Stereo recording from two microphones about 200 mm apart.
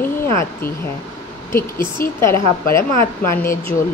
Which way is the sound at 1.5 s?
15° left (ahead or behind).